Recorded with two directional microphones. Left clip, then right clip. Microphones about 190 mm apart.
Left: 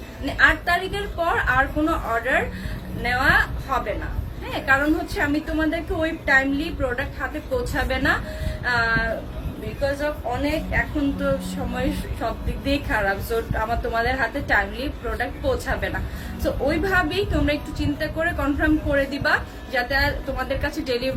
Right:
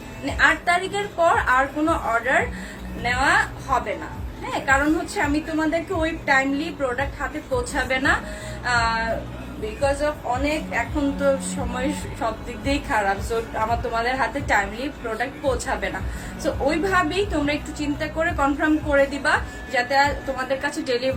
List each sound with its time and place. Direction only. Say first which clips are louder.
0.3 s a woman's voice: even; 15° left (ahead or behind)
11.7 s a woman's voice: even; 15° left (ahead or behind)